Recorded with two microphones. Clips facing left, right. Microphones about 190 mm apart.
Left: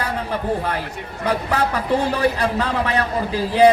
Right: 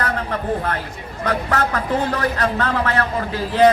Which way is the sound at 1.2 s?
10° left (ahead or behind).